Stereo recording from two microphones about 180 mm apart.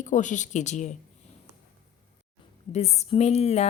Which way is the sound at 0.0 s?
45° left (ahead or behind).